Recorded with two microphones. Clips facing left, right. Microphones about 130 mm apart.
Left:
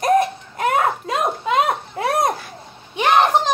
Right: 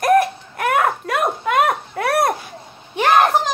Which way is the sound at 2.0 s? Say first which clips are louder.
Right 1 dB; 65° right (ahead or behind).